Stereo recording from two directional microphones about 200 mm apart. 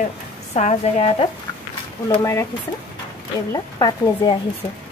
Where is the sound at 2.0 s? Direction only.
15° left (ahead or behind).